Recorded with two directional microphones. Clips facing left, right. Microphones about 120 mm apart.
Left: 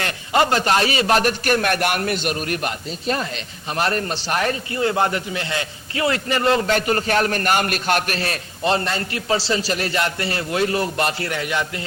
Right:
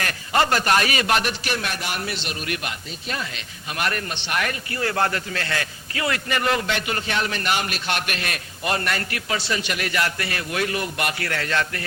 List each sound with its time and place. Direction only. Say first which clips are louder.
0.0 s a man's voice: left 3 dB; 25° left (ahead or behind)
4.7 s a man's voice: left 2 dB; 20° left (ahead or behind)